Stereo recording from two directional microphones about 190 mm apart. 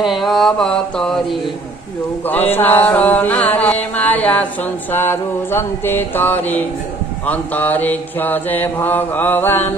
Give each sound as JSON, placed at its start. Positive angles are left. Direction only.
{"t": 0.0, "sound": "mantra", "side_deg": 0}